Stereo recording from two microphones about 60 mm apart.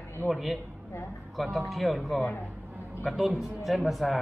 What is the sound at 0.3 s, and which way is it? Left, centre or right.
Speech, centre.